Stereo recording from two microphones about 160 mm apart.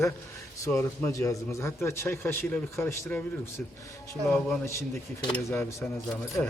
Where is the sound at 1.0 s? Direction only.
20° left (ahead or behind).